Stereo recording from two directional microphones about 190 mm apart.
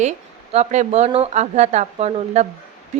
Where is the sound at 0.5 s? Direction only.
35° right (ahead or behind).